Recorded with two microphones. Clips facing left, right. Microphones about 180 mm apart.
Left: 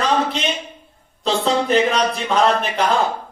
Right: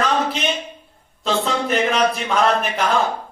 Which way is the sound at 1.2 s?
35° left (ahead or behind).